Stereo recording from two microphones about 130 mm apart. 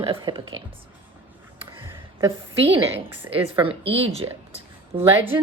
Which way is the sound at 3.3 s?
45° right (ahead or behind).